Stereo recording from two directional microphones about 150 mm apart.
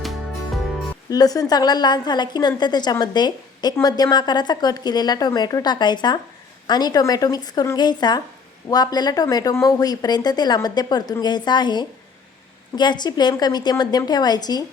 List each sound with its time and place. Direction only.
0.0 s music: centre (ahead or behind)
1.1 s speech: 25° left (ahead or behind)